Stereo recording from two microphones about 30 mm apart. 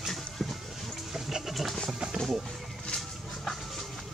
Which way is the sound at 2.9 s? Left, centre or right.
Centre.